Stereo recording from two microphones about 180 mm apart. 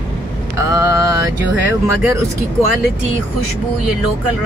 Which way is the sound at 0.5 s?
15° right (ahead or behind).